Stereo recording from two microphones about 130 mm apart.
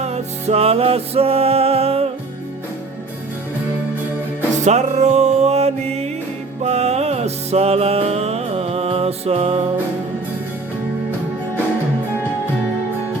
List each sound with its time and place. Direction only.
0.0 s music: 55° right (ahead or behind)
4.6 s music: 60° right (ahead or behind)